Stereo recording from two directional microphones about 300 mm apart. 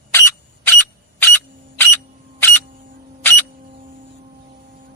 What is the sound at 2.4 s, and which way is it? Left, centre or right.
Single-lens reflex camera, centre.